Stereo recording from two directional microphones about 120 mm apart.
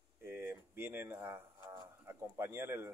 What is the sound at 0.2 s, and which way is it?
Speech, 20° right (ahead or behind).